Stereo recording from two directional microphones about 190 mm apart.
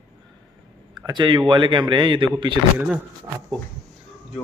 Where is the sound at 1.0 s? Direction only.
25° right (ahead or behind).